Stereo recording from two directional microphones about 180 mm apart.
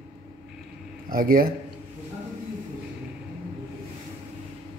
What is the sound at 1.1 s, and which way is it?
Speech, 55° right (ahead or behind).